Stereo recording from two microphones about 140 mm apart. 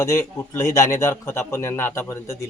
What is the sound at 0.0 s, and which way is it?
A man's voice, 20° left (ahead or behind).